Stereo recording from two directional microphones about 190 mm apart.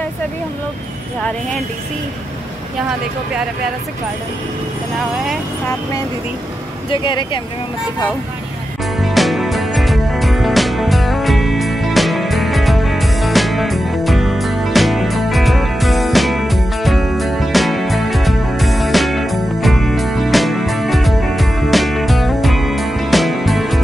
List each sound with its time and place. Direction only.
6.9 s speech: 25° left (ahead or behind)
8.9 s music: centre (ahead or behind)